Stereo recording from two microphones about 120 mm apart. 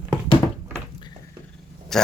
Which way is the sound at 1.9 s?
5° left (ahead or behind).